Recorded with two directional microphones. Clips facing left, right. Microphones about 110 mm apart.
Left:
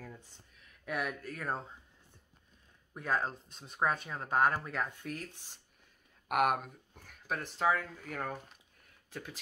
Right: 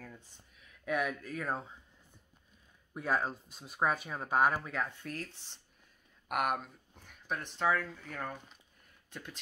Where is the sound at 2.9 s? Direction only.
10° right (ahead or behind).